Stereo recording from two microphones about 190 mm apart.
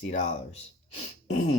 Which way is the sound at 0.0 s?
40° left (ahead or behind).